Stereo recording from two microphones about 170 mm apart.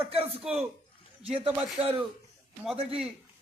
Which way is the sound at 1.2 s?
35° right (ahead or behind).